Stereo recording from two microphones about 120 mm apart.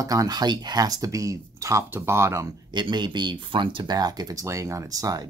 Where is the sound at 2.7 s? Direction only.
40° right (ahead or behind).